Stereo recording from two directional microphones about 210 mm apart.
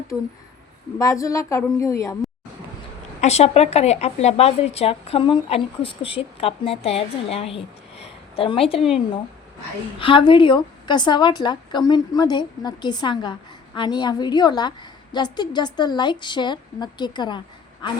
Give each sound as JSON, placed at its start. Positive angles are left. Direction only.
{"t": 0.1, "sound": "speech", "side_deg": 5}
{"t": 0.9, "sound": "a woman's voice", "side_deg": 15}
{"t": 3.2, "sound": "a woman's voice", "side_deg": 30}
{"t": 10.0, "sound": "a woman's voice", "side_deg": 25}